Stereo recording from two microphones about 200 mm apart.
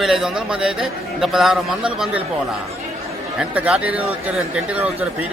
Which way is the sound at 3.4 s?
5° right (ahead or behind).